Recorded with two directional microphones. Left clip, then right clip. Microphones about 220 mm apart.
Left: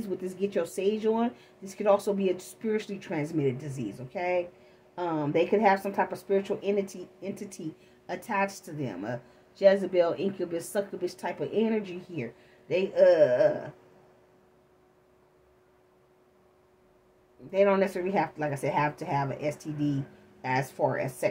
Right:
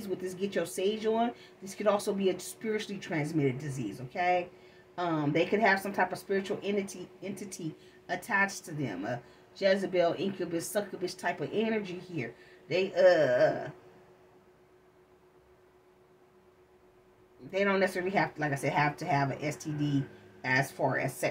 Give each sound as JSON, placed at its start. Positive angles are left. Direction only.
{"t": 0.2, "sound": "speech", "side_deg": 40}
{"t": 17.5, "sound": "speech", "side_deg": 40}